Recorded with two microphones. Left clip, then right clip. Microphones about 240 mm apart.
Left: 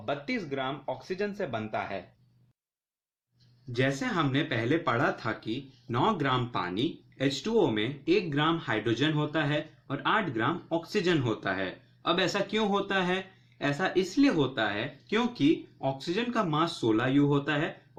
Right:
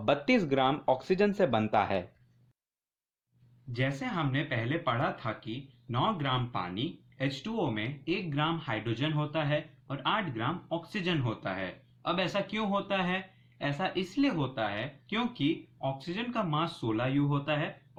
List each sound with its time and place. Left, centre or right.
0.0 s speech: right
3.7 s speech: right